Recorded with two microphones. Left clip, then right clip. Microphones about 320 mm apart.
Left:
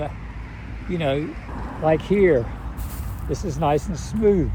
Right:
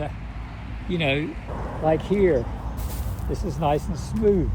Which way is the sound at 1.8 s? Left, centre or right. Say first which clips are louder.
Left 3 dB; left.